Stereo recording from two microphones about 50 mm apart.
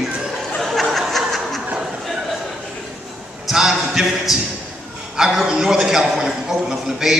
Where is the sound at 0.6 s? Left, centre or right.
Centre.